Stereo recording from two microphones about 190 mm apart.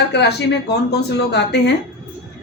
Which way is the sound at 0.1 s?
60° left (ahead or behind).